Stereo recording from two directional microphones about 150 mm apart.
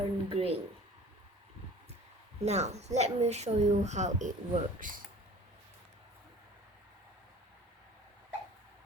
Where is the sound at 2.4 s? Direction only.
50° right (ahead or behind).